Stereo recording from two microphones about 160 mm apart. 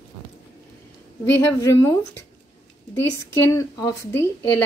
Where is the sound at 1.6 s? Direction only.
20° left (ahead or behind).